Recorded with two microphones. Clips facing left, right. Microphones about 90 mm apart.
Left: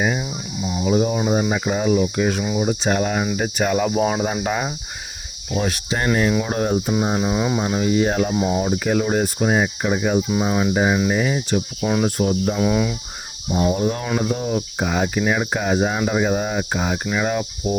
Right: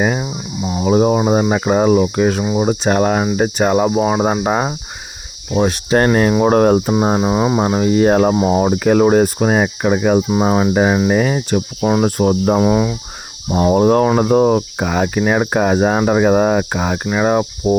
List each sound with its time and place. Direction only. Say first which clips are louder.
0.0 s speech: right 5 dB; 45° right (ahead or behind)
3.3 s cricket: right 6 dB; 40° right (ahead or behind)
3.9 s cricket: right 4 dB; 20° right (ahead or behind)
4.4 s cricket: right 6 dB; 35° right (ahead or behind)
6.1 s speech: right 1 dB; 50° right (ahead or behind)
6.4 s cricket: right 10 dB; 60° right (ahead or behind)
6.9 s cricket: right 5 dB; 35° right (ahead or behind); by 10.2 s 60° right (ahead or behind)
10.2 s speech: right 5 dB; 40° right (ahead or behind)
12.0 s speech: right 6 dB; 55° right (ahead or behind)
12.5 s cricket: right 5 dB; 30° right (ahead or behind)
13.5 s cricket: right 8 dB; 55° right (ahead or behind)
17.1 s cricket: right 7 dB; 40° right (ahead or behind)